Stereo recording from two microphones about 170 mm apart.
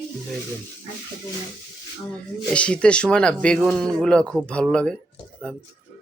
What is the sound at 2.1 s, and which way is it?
Speech, 5° left (ahead or behind).